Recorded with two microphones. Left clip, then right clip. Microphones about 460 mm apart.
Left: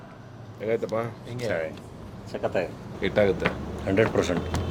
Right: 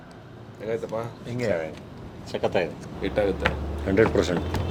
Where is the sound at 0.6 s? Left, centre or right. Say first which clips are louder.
Left 3 dB; left.